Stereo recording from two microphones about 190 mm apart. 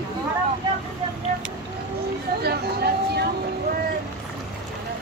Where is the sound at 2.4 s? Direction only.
55° right (ahead or behind).